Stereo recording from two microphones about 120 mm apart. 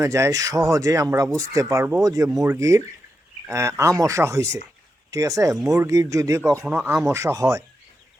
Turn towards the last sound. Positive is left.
turn(degrees=-25)  # may be behind; listen again after turning